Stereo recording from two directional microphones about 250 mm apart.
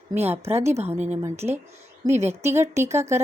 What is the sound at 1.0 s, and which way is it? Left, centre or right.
A woman's voice, centre.